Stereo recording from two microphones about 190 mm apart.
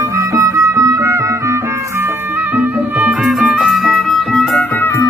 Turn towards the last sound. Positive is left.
turn(degrees=0)  # may be behind; listen again after turning